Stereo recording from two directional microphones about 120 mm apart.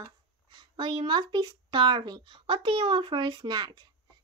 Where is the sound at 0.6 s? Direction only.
40° right (ahead or behind).